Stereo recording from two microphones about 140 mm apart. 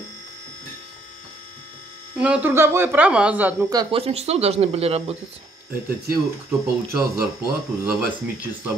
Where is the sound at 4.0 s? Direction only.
45° right (ahead or behind).